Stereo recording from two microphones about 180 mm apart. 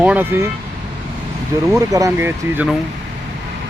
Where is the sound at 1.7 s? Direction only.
20° right (ahead or behind).